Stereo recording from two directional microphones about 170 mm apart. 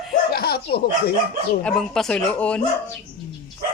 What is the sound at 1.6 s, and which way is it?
Speech, 5° left (ahead or behind).